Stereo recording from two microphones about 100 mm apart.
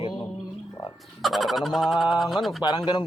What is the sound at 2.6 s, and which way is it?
Speech, 40° left (ahead or behind).